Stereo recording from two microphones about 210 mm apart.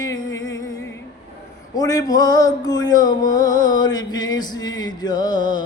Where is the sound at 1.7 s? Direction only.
15° left (ahead or behind).